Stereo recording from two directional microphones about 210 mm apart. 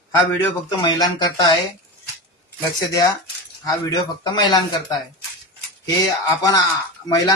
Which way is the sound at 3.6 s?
20° left (ahead or behind).